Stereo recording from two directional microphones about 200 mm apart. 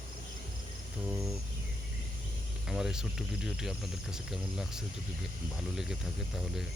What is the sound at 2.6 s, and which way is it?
Speech, centre (ahead or behind).